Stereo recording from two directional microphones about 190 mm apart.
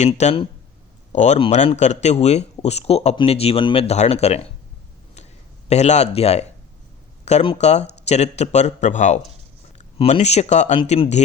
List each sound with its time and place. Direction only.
0.0 s speech: 35° left (ahead or behind)
5.6 s speech: 35° left (ahead or behind)